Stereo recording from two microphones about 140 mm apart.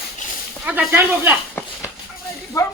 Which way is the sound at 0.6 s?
10° right (ahead or behind).